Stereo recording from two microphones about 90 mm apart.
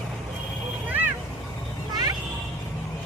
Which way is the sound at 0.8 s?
20° right (ahead or behind).